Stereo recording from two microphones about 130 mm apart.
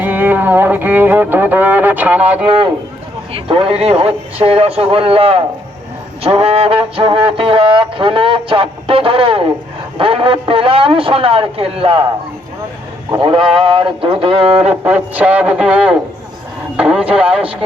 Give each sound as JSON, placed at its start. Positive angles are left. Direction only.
{"t": 0.0, "sound": "music", "side_deg": -15}
{"t": 3.3, "sound": "music", "side_deg": -45}
{"t": 13.1, "sound": "music", "side_deg": -45}
{"t": 14.7, "sound": "speech", "side_deg": -10}